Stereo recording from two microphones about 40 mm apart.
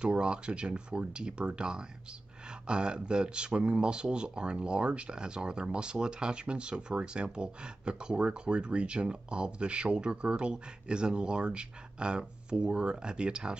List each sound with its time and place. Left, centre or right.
0.0 s speech: right